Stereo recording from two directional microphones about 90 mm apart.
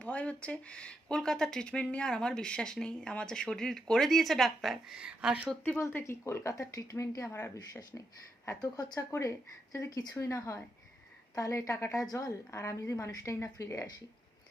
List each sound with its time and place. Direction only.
0.0 s speech: 15° left (ahead or behind); by 5.4 s 10° right (ahead or behind)
5.8 s a woman's voice: 25° left (ahead or behind)